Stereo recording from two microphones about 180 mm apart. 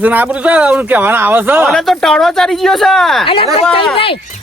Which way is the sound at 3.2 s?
30° left (ahead or behind).